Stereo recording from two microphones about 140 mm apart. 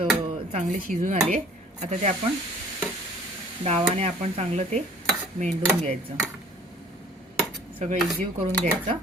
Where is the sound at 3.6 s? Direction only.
45° right (ahead or behind).